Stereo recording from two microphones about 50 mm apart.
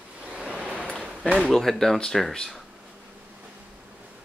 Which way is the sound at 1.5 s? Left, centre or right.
Centre.